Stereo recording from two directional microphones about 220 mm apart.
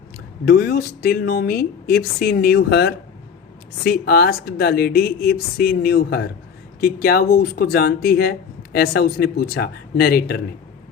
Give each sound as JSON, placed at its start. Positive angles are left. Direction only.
{"t": 0.4, "sound": "speech", "side_deg": 45}